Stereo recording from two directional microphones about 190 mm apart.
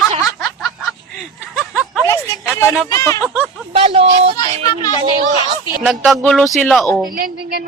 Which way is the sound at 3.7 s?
30° right (ahead or behind).